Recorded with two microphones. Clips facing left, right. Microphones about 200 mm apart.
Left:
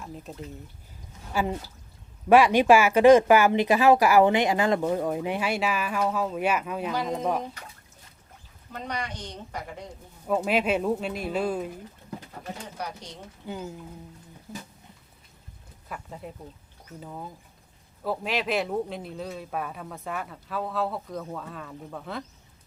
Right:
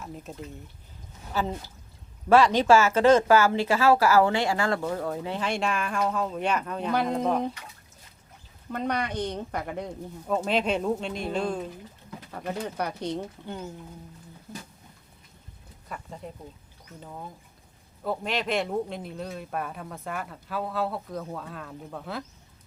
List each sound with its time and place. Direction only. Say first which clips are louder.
0.0 s speech: even; centre (ahead or behind)
1.3 s speech: left 2 dB; 10° left (ahead or behind)
8.7 s speech: right 6 dB; 55° right (ahead or behind)
10.2 s speech: left 1 dB; 5° left (ahead or behind)
12.6 s speech: right 7 dB; 60° right (ahead or behind)
13.5 s speech: left 4 dB; 5° left (ahead or behind)
14.5 s a sound: left 1 dB; centre (ahead or behind)
15.9 s speech: even; 5° left (ahead or behind)